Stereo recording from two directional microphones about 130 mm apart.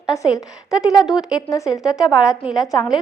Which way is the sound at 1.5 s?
25° left (ahead or behind).